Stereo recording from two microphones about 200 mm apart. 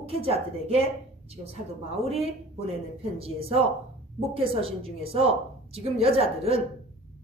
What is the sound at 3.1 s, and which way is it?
A woman's voice, 30° right (ahead or behind).